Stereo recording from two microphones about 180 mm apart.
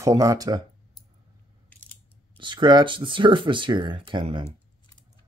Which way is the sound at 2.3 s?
25° right (ahead or behind).